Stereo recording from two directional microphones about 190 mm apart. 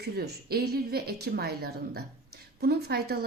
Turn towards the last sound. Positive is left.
turn(degrees=-55)  # may be behind; listen again after turning